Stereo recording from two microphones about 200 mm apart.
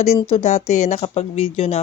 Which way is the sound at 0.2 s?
30° left (ahead or behind).